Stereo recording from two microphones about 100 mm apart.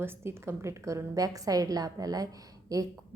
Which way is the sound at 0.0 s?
25° right (ahead or behind).